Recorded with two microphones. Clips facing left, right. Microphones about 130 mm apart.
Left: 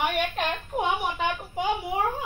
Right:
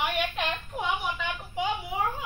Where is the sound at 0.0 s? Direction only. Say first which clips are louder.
Left 3 dB; 45° left (ahead or behind).